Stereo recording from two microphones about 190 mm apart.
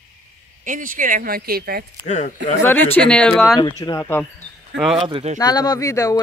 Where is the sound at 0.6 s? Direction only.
45° right (ahead or behind).